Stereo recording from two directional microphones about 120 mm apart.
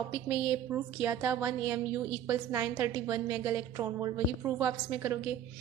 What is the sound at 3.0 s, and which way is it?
A woman's voice, 30° right (ahead or behind).